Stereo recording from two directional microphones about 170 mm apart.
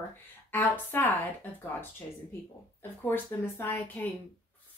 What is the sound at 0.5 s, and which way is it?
Speech, 10° left (ahead or behind).